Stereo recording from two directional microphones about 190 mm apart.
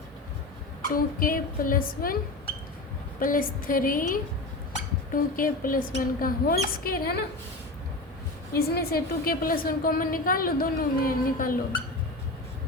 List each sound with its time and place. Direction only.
0.9 s a woman's voice: 50° left (ahead or behind)
3.2 s a woman's voice: 45° left (ahead or behind)
8.5 s a woman's voice: 55° left (ahead or behind)